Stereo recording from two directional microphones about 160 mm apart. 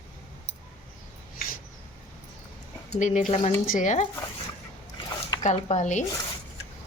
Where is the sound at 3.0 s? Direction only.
50° left (ahead or behind).